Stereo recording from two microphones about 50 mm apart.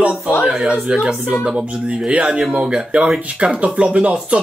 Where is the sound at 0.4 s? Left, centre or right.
Centre.